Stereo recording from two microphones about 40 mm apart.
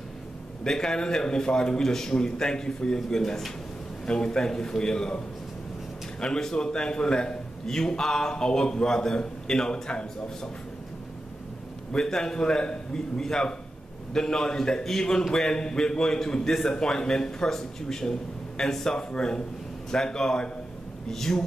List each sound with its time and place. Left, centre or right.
0.7 s a man's voice: centre
6.2 s a man's voice: centre
11.9 s a man's voice: centre